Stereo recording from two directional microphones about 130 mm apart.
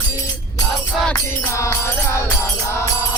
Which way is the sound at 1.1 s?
20° left (ahead or behind).